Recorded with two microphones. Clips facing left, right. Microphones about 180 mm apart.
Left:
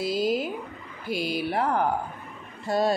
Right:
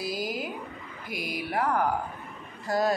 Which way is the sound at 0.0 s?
25° left (ahead or behind).